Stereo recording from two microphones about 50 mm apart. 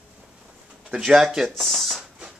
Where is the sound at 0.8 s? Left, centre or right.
Centre.